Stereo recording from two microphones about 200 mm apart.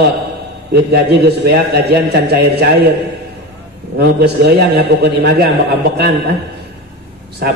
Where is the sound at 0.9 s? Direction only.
55° right (ahead or behind).